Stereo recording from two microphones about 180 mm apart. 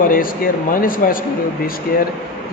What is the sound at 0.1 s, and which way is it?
Speech, 50° left (ahead or behind).